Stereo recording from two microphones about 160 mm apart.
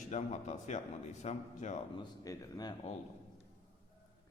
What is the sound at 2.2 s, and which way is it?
Speech, 25° left (ahead or behind).